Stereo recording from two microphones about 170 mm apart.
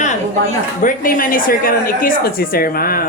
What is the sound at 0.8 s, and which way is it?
A woman's voice, 55° left (ahead or behind).